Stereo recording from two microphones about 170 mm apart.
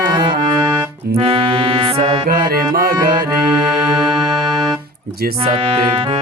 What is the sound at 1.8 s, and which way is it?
Music, 25° right (ahead or behind).